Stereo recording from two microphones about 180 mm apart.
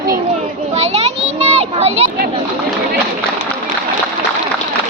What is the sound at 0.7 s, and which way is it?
Children playing, 35° right (ahead or behind).